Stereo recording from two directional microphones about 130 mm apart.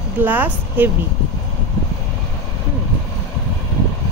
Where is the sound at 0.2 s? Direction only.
15° right (ahead or behind).